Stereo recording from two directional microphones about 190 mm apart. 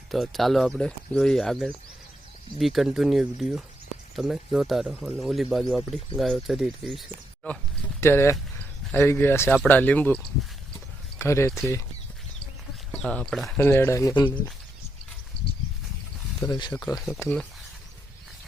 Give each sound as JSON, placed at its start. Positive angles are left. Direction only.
{"t": 0.1, "sound": "speech", "side_deg": 0}
{"t": 11.2, "sound": "speech", "side_deg": 15}
{"t": 12.9, "sound": "speech", "side_deg": 5}
{"t": 15.4, "sound": "a sound", "side_deg": 60}
{"t": 16.4, "sound": "speech", "side_deg": 20}